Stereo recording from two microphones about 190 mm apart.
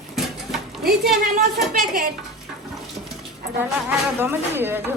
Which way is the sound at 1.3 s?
50° right (ahead or behind).